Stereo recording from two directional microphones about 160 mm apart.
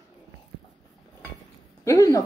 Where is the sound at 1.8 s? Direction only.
20° left (ahead or behind).